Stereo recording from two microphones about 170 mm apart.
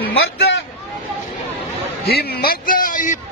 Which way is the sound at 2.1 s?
70° left (ahead or behind).